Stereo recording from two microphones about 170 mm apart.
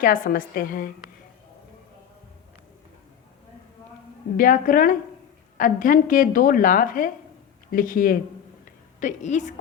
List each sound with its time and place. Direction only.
0.0 s a woman's voice: 55° left (ahead or behind)
4.4 s a woman's voice: 55° left (ahead or behind)